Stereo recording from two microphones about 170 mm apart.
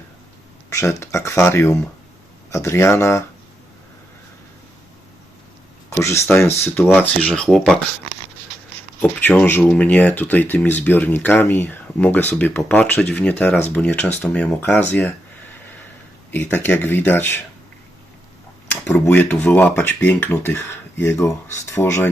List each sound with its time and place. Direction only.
0.7 s speech: 15° left (ahead or behind)
5.9 s speech: 15° left (ahead or behind)
9.0 s speech: 10° left (ahead or behind)
16.3 s speech: 10° left (ahead or behind)
18.9 s speech: 10° left (ahead or behind)